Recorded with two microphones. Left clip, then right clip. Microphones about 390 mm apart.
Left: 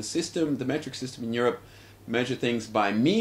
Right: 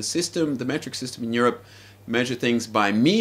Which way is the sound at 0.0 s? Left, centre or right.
Centre.